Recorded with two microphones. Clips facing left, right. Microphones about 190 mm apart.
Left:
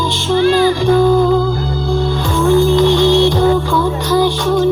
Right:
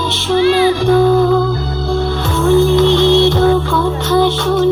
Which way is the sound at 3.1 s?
15° left (ahead or behind).